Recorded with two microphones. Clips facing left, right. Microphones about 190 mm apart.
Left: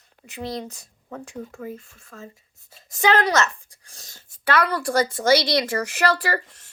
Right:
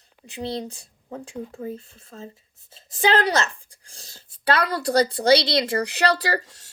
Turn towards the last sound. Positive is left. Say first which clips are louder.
# even
turn(degrees=-35)  # may be behind; listen again after turning